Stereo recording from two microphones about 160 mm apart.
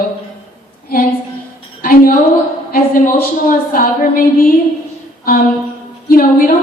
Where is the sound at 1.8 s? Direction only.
65° left (ahead or behind).